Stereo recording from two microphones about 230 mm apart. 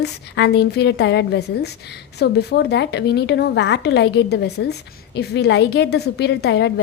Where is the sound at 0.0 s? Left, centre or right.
Left.